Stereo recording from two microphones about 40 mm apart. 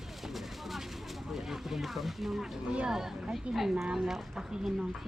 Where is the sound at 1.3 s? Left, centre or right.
Centre.